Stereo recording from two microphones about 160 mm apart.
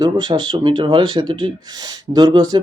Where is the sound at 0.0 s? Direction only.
25° right (ahead or behind).